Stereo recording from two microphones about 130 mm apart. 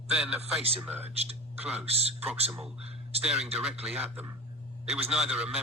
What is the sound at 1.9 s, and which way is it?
Speech, 50° right (ahead or behind).